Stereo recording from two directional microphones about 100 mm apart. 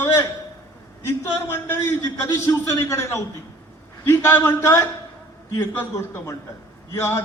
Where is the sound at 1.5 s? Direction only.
25° left (ahead or behind).